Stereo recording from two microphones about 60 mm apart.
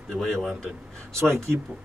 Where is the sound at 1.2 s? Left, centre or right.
Right.